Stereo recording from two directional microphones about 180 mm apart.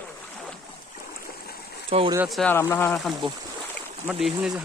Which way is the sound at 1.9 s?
35° right (ahead or behind).